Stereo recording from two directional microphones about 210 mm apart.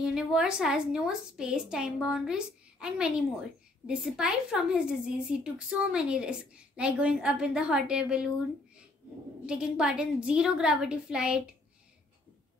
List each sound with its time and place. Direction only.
0.0 s a woman's voice: 5° right (ahead or behind)
9.5 s a woman's voice: 5° right (ahead or behind)